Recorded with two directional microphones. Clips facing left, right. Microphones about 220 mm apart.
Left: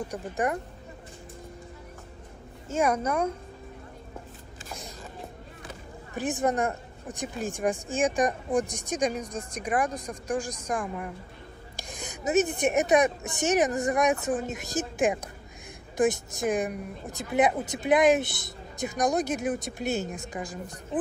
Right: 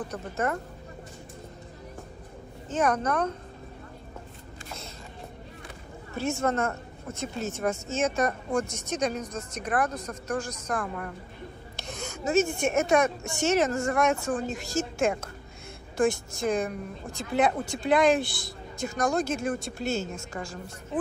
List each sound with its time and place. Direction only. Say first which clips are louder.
0.1 s speech: left 1 dB; 15° left (ahead or behind)
2.7 s speech: even; 10° left (ahead or behind)
6.1 s speech: even; 15° left (ahead or behind)